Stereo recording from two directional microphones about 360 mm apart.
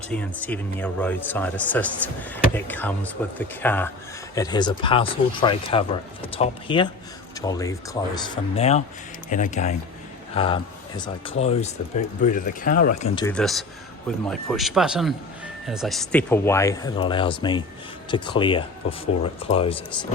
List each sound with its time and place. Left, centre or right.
0.1 s speech: centre; by 12.9 s left
13.1 s speech: centre